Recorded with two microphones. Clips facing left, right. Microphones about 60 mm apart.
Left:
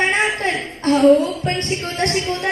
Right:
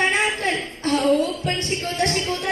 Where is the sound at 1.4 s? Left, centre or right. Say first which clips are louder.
Left 3 dB; left.